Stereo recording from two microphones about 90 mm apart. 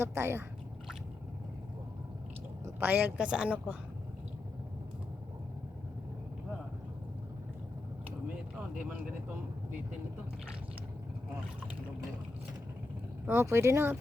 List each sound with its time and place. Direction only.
0.0 s speech: 30° right (ahead or behind)
2.8 s a woman's voice: 20° right (ahead or behind)
13.2 s speech: 30° right (ahead or behind)